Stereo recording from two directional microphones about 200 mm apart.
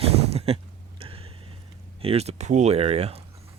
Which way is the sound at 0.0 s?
30° right (ahead or behind).